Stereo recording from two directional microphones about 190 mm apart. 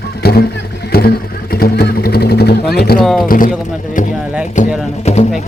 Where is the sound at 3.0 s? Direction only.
Centre (ahead or behind).